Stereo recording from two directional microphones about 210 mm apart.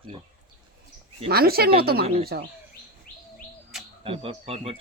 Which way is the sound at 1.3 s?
45° right (ahead or behind).